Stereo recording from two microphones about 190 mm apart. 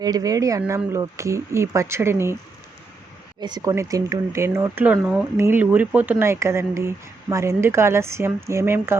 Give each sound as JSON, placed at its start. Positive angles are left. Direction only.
{"t": 0.0, "sound": "speech", "side_deg": -20}
{"t": 3.4, "sound": "speech", "side_deg": -20}